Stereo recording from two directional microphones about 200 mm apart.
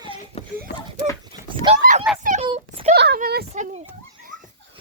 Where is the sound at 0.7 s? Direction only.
55° left (ahead or behind).